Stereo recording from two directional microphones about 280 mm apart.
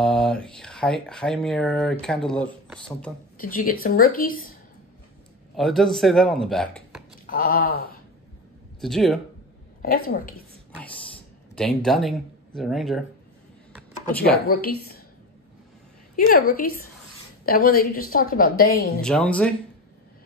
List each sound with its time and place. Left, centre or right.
0.0 s speech: centre
3.3 s a woman's voice: left
5.6 s speech: centre
7.2 s a woman's voice: left
8.8 s speech: centre
9.8 s a woman's voice: left
11.5 s speech: centre
14.3 s a woman's voice: left
16.2 s a woman's voice: left
17.5 s a woman's voice: left
19.0 s speech: centre